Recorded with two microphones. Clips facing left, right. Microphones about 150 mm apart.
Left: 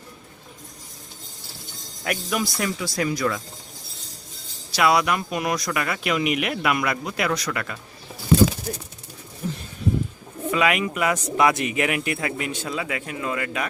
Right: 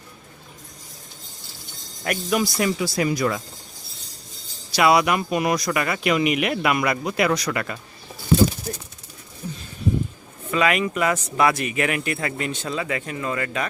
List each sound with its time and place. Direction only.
2.0 s speech: centre (ahead or behind)
4.7 s speech: 5° right (ahead or behind)
9.4 s a sound: 75° left (ahead or behind)
10.5 s speech: 10° left (ahead or behind)